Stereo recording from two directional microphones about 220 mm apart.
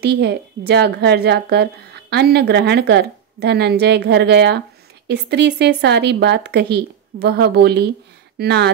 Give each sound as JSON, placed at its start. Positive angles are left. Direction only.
{"t": 0.0, "sound": "a woman's voice", "side_deg": -50}